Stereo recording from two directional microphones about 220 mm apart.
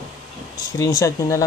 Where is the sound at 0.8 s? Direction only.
15° left (ahead or behind).